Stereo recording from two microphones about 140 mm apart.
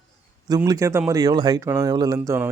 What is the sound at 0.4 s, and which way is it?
A man's voice, 25° right (ahead or behind).